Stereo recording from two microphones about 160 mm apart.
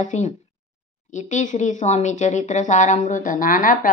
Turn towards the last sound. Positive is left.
turn(degrees=60)  # may be behind; listen again after turning